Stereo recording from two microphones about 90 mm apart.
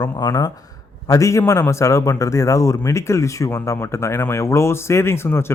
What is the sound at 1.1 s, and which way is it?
A man's voice, 35° left (ahead or behind).